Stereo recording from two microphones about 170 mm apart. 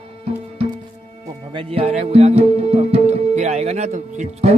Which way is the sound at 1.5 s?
35° right (ahead or behind).